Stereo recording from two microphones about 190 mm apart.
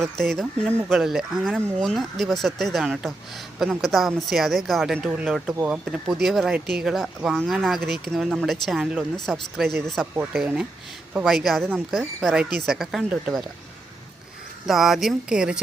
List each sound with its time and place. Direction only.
0.2 s speech: centre (ahead or behind)
7.8 s speech: 55° right (ahead or behind)
8.0 s speech: centre (ahead or behind)
14.7 s speech: centre (ahead or behind)